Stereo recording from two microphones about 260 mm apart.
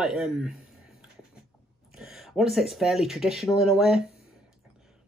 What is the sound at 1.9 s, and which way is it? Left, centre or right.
Speech, centre.